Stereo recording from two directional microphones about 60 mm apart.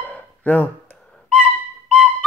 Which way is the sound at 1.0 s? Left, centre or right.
Centre.